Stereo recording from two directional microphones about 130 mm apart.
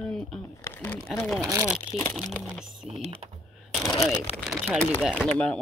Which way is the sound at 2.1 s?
Centre (ahead or behind).